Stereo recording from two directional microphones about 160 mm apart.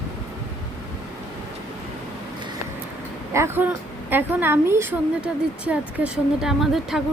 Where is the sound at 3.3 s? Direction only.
15° right (ahead or behind).